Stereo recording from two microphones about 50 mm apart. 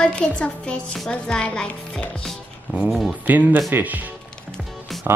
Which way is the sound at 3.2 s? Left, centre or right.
Right.